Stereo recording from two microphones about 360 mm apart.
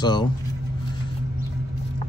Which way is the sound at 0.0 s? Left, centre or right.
Centre.